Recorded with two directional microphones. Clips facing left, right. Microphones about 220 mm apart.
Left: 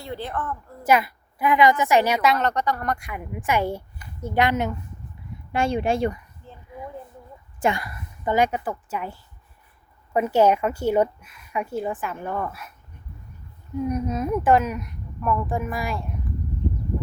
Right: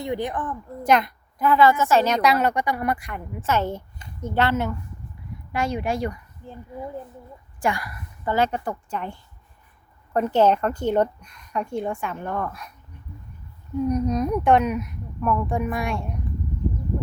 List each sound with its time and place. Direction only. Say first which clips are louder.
0.0 s speech: right 4 dB; 15° right (ahead or behind)
0.9 s a woman's voice: even; 5° left (ahead or behind)
2.3 s speech: right 1 dB; 10° right (ahead or behind)
3.1 s a woman's voice: even; 10° left (ahead or behind)
5.5 s speech: left 3 dB; 30° left (ahead or behind)
6.4 s a sound: right 6 dB; 15° right (ahead or behind)
7.6 s a woman's voice: left 2 dB; 25° left (ahead or behind); by 12.7 s 5° left (ahead or behind)
13.8 s speech: right 3 dB; 5° left (ahead or behind)